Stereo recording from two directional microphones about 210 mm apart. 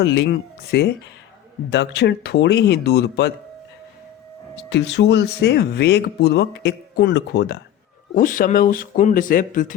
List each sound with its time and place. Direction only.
0.0 s speech: 55° left (ahead or behind)
4.7 s speech: 55° left (ahead or behind)
8.1 s speech: 40° left (ahead or behind)